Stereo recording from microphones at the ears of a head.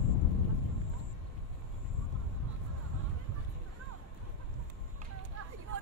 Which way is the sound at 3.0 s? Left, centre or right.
Right.